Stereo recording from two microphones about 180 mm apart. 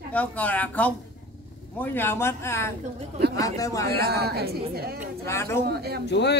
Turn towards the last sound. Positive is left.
turn(degrees=70)  # may be behind; listen again after turning